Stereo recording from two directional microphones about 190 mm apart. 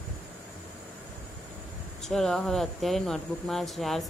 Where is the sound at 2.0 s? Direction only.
Centre (ahead or behind).